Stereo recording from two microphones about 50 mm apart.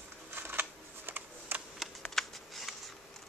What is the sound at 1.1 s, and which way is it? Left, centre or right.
Camera, right.